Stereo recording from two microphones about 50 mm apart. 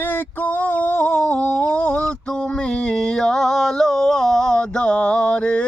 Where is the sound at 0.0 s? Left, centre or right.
Left.